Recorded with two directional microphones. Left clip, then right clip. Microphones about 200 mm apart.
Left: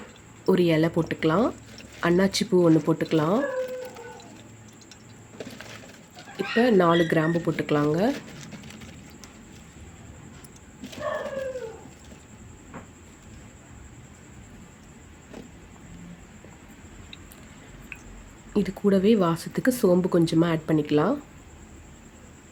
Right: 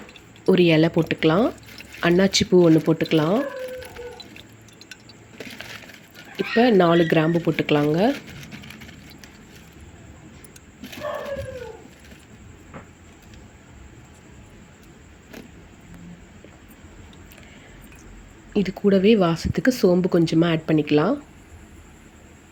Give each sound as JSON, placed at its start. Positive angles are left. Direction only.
{"t": 0.4, "sound": "speech", "side_deg": -10}
{"t": 6.3, "sound": "speech", "side_deg": -10}
{"t": 18.5, "sound": "speech", "side_deg": -5}